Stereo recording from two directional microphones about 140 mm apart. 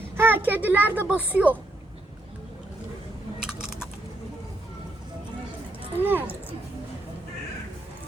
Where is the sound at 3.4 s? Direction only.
5° right (ahead or behind).